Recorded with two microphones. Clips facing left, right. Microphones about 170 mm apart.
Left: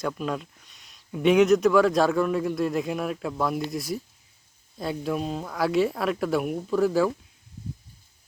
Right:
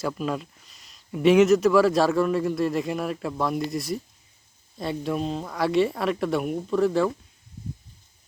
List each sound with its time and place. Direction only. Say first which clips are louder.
0.0 s speech: right 1 dB; centre (ahead or behind)